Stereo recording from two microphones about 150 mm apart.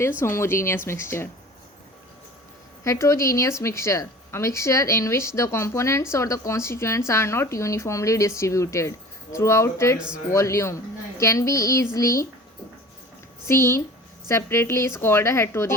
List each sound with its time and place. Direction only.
0.2 s speech: 15° left (ahead or behind)
2.8 s a woman's voice: 20° left (ahead or behind)
13.5 s a woman's voice: 15° left (ahead or behind)